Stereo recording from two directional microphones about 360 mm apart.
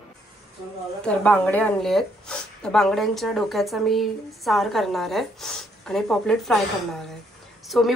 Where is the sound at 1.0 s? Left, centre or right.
Centre.